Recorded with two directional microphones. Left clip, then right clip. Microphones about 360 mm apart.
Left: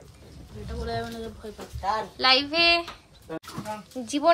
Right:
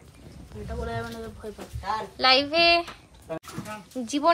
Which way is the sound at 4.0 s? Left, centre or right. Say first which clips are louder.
Even; centre.